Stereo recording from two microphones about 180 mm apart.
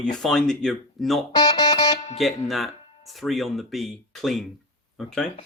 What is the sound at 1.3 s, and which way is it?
Music, 20° left (ahead or behind).